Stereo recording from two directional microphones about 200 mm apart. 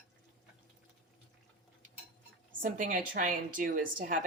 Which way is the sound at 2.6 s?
40° right (ahead or behind).